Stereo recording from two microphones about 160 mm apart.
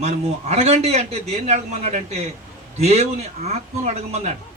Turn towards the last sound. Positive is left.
turn(degrees=-40)  # may be behind; listen again after turning